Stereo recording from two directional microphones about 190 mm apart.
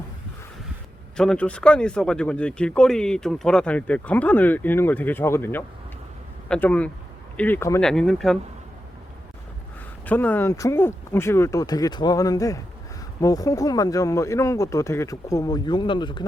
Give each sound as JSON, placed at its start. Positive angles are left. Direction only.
{"t": 1.1, "sound": "speech", "side_deg": 5}
{"t": 10.1, "sound": "speech", "side_deg": 10}